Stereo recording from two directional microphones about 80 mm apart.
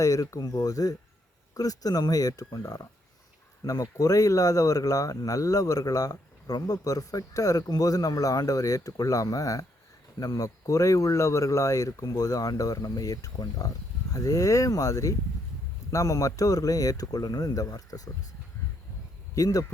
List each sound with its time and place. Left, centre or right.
0.0 s speech: left
19.3 s speech: left